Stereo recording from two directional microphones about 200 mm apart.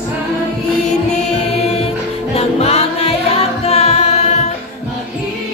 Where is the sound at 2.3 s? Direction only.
30° left (ahead or behind).